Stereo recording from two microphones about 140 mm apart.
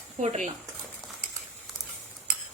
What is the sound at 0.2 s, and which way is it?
Speech, 55° right (ahead or behind).